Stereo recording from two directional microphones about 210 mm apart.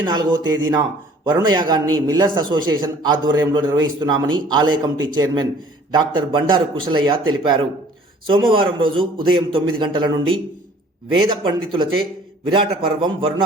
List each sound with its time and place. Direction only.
0.0 s a man's voice: 20° right (ahead or behind)